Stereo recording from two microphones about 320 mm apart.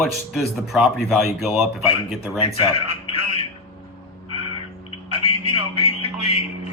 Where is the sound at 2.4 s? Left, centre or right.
Centre.